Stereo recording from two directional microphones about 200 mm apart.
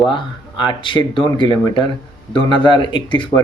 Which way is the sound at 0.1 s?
25° left (ahead or behind).